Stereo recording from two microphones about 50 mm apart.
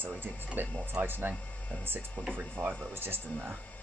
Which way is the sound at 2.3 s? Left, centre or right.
Right.